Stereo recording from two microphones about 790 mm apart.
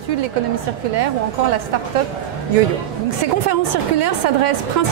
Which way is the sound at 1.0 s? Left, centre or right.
Right.